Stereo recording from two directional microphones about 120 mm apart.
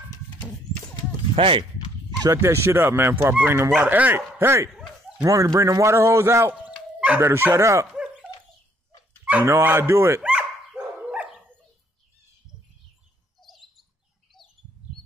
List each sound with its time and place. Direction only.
1.3 s speech: 50° right (ahead or behind)
2.2 s a man's voice: 25° right (ahead or behind)
4.6 s bow-wow: centre (ahead or behind)
5.2 s a man's voice: 30° right (ahead or behind)
7.9 s dog: 5° right (ahead or behind)
9.2 s a man's voice: 15° right (ahead or behind)
10.2 s dog: 10° right (ahead or behind)
13.4 s bird: centre (ahead or behind)